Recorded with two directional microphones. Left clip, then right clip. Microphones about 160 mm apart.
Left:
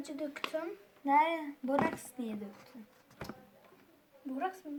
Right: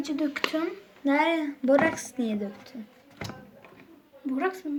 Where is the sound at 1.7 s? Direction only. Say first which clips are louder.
Right 9 dB; 60° left (ahead or behind).